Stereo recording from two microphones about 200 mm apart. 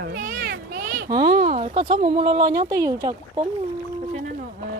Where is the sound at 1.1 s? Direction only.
20° right (ahead or behind).